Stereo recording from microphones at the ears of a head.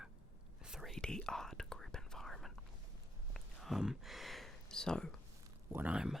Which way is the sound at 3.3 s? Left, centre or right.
Centre.